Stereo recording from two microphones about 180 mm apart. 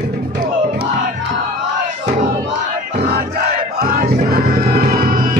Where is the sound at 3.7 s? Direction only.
55° right (ahead or behind).